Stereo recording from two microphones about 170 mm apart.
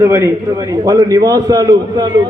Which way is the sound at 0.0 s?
15° right (ahead or behind).